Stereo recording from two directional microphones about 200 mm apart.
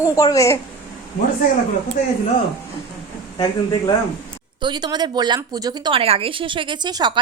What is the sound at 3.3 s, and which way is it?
Speech, 20° left (ahead or behind).